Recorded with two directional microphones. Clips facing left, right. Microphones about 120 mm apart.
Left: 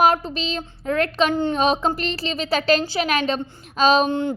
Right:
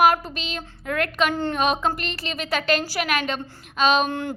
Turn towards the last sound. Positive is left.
turn(degrees=20)  # may be behind; listen again after turning